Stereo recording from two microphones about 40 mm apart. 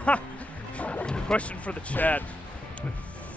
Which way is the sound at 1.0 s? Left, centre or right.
Left.